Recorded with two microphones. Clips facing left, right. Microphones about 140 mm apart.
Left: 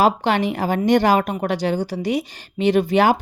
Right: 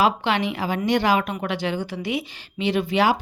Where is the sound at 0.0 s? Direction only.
45° left (ahead or behind).